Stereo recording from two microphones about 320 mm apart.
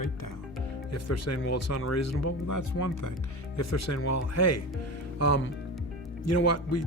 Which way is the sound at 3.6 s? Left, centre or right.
Left.